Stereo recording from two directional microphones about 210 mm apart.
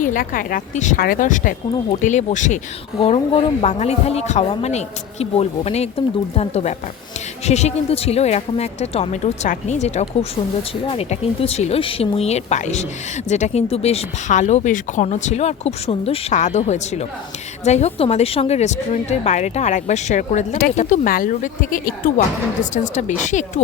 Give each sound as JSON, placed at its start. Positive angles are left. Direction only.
{"t": 0.0, "sound": "a woman's voice", "side_deg": 40}